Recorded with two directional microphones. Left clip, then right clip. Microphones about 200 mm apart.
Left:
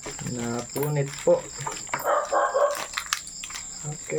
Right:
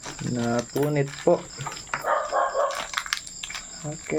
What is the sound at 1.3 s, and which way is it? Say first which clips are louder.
Speech: left 1 dB; 50° right (ahead or behind).